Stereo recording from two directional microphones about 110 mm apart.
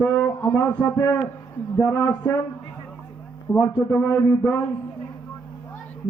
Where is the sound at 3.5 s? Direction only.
20° left (ahead or behind).